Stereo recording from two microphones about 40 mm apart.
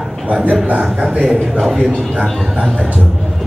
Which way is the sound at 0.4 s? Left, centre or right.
Centre.